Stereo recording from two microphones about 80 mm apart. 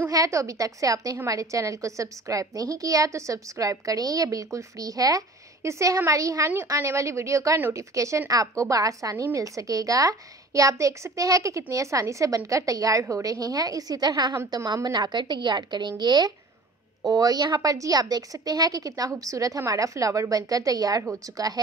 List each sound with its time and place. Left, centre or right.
0.1 s a woman's voice: right
17.0 s a woman's voice: right